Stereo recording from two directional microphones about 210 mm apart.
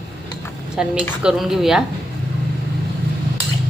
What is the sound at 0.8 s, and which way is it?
A woman's voice, 5° right (ahead or behind).